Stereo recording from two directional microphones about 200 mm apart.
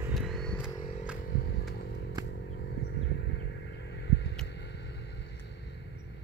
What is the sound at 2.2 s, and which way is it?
Vehicle, 55° left (ahead or behind).